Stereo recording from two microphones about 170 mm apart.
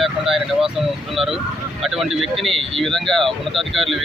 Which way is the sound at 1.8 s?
Centre (ahead or behind).